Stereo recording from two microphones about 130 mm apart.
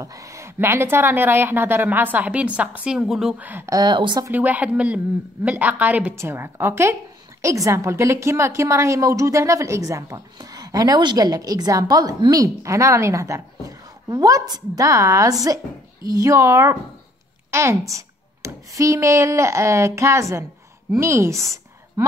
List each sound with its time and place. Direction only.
0.0 s a woman's voice: 25° right (ahead or behind)
3.7 s a woman's voice: 35° right (ahead or behind)
4.3 s a woman's voice: 15° right (ahead or behind)
22.0 s a sound: 25° right (ahead or behind)